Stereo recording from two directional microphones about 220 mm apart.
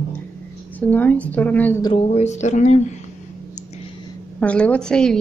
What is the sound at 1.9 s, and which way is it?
Speech, 30° left (ahead or behind).